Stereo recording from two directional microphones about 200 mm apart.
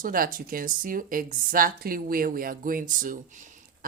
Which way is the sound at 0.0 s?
45° right (ahead or behind).